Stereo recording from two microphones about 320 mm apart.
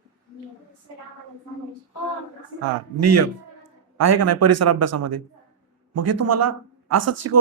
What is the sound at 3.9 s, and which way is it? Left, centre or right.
Speech, right.